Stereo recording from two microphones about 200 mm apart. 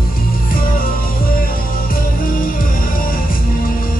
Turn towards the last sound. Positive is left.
turn(degrees=45)  # may be behind; listen again after turning